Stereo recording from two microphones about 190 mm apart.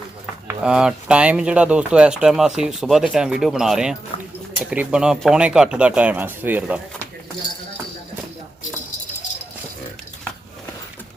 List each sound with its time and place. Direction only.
0.4 s speech: 5° right (ahead or behind)
4.1 s a sound: 35° left (ahead or behind)
4.7 s speech: 5° right (ahead or behind)